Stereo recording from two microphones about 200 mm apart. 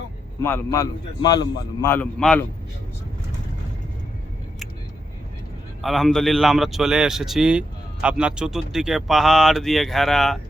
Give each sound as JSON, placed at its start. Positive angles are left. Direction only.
{"t": 0.4, "sound": "a man's voice", "side_deg": 15}
{"t": 5.8, "sound": "speech", "side_deg": 0}